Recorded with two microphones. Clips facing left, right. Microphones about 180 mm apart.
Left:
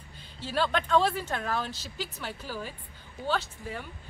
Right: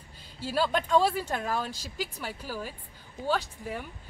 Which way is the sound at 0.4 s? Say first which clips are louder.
Right 1 dB; 10° right (ahead or behind).